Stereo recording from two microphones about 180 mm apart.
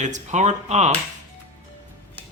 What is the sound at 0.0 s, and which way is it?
Speech, 40° right (ahead or behind).